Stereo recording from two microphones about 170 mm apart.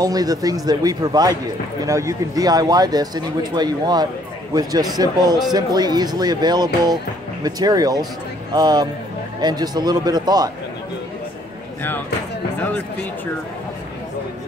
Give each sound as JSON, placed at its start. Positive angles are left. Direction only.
{"t": 0.0, "sound": "a man's voice", "side_deg": -20}